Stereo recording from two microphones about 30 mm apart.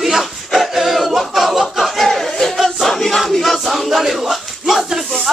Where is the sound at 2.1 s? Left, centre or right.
Centre.